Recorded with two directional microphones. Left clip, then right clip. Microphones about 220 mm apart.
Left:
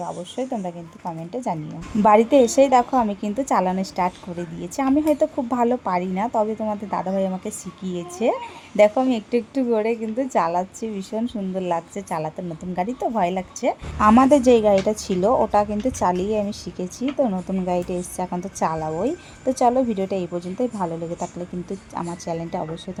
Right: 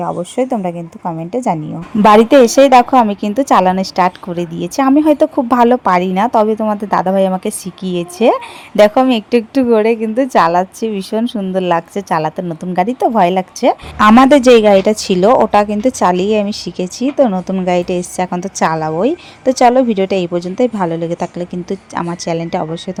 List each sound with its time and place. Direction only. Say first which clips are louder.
0.0 s a woman's voice: right 11 dB; 30° right (ahead or behind)
2.0 s a woman's voice: right 8 dB; 20° right (ahead or behind)